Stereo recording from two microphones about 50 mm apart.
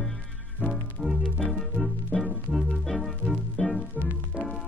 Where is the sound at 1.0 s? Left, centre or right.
Centre.